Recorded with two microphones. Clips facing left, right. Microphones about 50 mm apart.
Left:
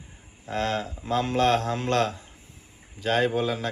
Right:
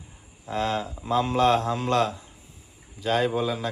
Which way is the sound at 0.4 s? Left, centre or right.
Left.